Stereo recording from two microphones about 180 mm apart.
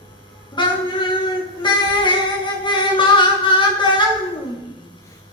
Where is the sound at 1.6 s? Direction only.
25° left (ahead or behind).